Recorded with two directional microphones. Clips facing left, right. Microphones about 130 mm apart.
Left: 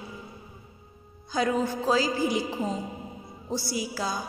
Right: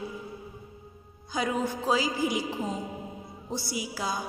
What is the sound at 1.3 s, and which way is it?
A woman's voice, 15° right (ahead or behind).